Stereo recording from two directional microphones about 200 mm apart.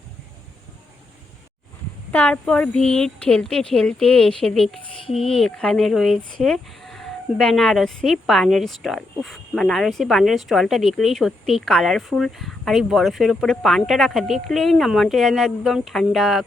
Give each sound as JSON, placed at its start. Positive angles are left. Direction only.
{"t": 2.1, "sound": "speech", "side_deg": 5}